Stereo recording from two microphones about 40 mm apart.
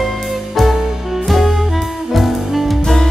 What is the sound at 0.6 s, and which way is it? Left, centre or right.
Music, centre.